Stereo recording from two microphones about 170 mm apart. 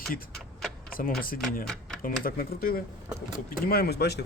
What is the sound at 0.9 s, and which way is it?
Speech, 55° left (ahead or behind).